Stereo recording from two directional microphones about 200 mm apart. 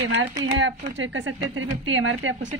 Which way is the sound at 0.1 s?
70° right (ahead or behind).